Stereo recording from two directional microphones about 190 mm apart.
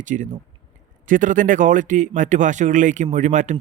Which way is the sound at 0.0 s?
40° right (ahead or behind).